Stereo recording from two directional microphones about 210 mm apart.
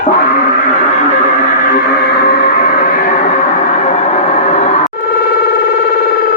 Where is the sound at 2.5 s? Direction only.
40° left (ahead or behind).